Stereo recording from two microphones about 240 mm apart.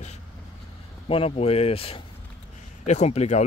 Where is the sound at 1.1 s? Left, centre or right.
Left.